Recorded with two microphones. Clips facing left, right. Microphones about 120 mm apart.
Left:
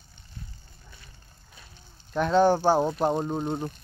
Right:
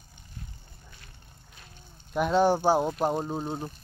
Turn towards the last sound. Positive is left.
turn(degrees=-5)  # may be behind; listen again after turning